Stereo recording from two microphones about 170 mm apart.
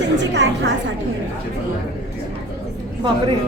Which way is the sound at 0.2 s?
90° right.